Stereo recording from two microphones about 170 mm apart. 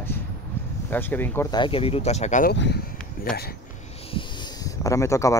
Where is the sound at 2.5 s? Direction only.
80° left.